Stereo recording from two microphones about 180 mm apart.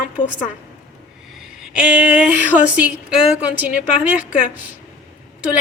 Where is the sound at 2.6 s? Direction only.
5° right (ahead or behind).